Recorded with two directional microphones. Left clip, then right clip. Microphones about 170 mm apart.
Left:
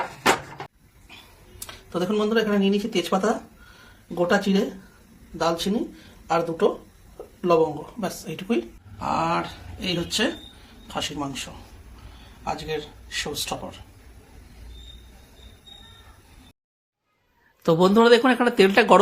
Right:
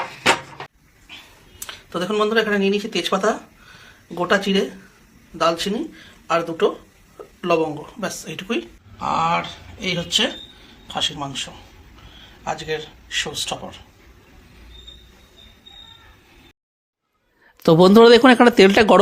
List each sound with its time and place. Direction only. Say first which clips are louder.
1.6 s a man's voice: right 2 dB; 5° right (ahead or behind)
12.5 s speech: right 3 dB; centre (ahead or behind)
17.6 s speech: right 7 dB; 50° right (ahead or behind)